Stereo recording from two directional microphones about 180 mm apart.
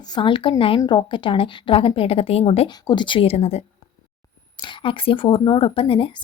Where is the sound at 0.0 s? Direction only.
25° left (ahead or behind).